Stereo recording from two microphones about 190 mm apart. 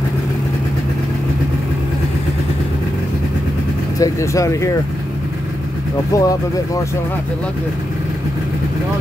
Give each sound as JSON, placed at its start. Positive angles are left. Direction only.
{"t": 4.0, "sound": "speech", "side_deg": 15}
{"t": 6.1, "sound": "speech", "side_deg": 15}